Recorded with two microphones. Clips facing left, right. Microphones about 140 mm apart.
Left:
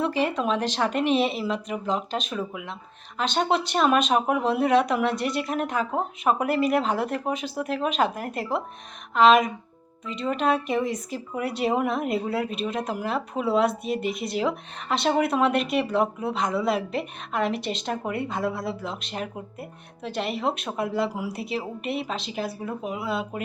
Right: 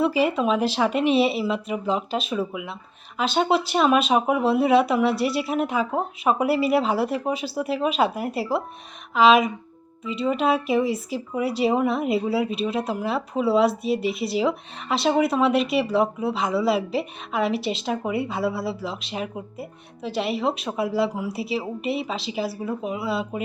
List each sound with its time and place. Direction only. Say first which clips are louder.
0.0 s speech: right 4 dB; 5° right (ahead or behind)